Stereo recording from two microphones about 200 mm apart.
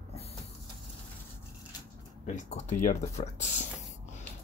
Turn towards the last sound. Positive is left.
turn(degrees=35)  # may be behind; listen again after turning